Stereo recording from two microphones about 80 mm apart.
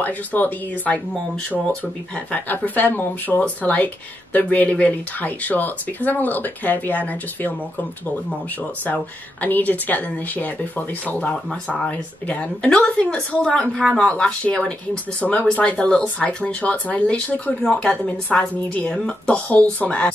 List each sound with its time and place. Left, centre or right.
0.0 s speech: left
2.3 s speech: centre
8.8 s speech: centre